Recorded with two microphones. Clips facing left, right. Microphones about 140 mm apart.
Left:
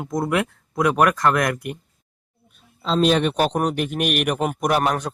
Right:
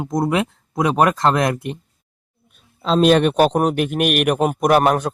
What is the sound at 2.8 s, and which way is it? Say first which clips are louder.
A man's voice: right 4 dB; 60° right (ahead or behind).